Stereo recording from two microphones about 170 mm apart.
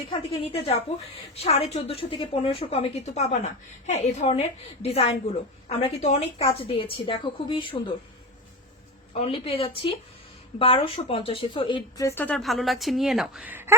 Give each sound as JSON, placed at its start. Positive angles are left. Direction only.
{"t": 0.1, "sound": "a woman's voice", "side_deg": 35}
{"t": 9.1, "sound": "a woman's voice", "side_deg": 35}
{"t": 12.0, "sound": "a woman's voice", "side_deg": 10}